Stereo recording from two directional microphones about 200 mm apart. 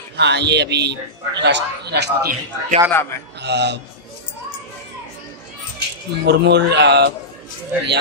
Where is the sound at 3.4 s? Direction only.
60° right (ahead or behind).